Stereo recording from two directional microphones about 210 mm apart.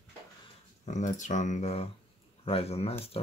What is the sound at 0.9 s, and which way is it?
Speech, 35° left (ahead or behind).